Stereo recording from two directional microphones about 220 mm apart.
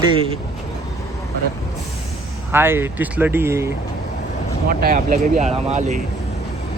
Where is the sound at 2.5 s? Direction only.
10° right (ahead or behind).